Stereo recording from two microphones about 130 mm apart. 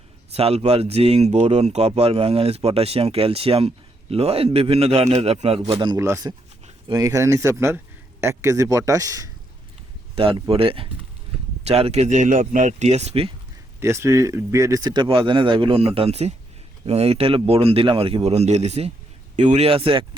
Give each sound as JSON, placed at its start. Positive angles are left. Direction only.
{"t": 0.3, "sound": "speech", "side_deg": -50}
{"t": 6.0, "sound": "speech", "side_deg": -25}
{"t": 10.2, "sound": "speech", "side_deg": -40}
{"t": 11.6, "sound": "speech", "side_deg": -55}
{"t": 13.7, "sound": "speech", "side_deg": -20}
{"t": 19.4, "sound": "speech", "side_deg": -65}
{"t": 19.6, "sound": "speech", "side_deg": -45}